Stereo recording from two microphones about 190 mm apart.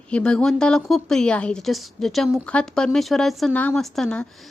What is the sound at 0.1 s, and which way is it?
A woman's voice, 5° left (ahead or behind).